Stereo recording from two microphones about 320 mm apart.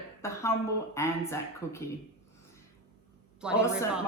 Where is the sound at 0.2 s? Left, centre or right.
Centre.